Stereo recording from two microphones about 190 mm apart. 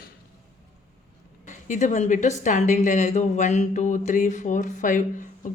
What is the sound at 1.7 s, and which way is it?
Speech, 40° left (ahead or behind).